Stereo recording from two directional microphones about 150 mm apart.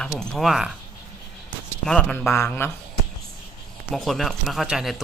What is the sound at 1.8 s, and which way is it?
Speech, 5° left (ahead or behind).